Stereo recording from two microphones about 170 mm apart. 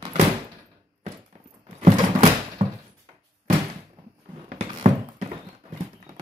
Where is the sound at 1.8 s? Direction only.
35° right (ahead or behind).